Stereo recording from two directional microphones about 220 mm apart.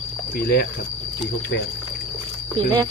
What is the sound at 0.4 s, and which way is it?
Cricket, 45° left (ahead or behind).